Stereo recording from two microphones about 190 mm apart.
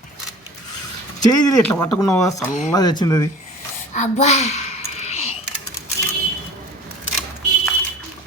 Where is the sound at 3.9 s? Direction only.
35° left (ahead or behind).